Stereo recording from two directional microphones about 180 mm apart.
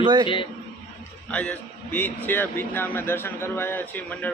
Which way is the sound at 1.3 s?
5° left (ahead or behind).